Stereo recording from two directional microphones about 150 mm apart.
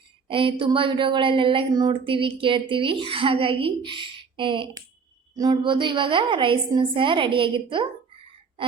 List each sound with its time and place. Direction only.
0.3 s speech: 35° right (ahead or behind)